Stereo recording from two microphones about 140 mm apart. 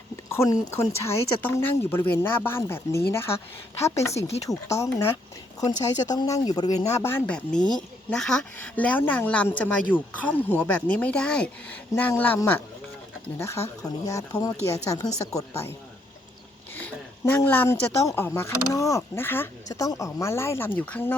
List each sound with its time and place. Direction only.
0.3 s speech: 20° left (ahead or behind)
7.3 s speech: 5° left (ahead or behind); by 15.7 s 20° left (ahead or behind)
16.7 s speech: 15° left (ahead or behind)